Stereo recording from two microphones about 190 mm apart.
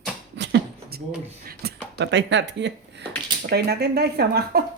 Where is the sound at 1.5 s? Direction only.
60° right (ahead or behind).